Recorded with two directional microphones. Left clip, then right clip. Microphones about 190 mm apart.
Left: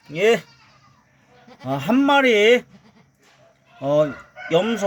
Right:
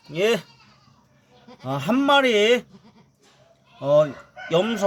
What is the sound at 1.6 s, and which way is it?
Speech, 5° right (ahead or behind).